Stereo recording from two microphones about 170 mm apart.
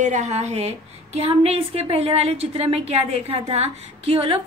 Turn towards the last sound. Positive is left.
turn(degrees=-35)  # may be behind; listen again after turning